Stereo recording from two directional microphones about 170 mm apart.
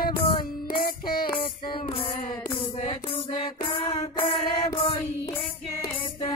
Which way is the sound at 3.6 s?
35° left (ahead or behind).